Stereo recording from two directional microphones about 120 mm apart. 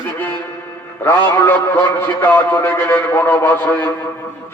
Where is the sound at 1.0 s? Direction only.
20° left (ahead or behind).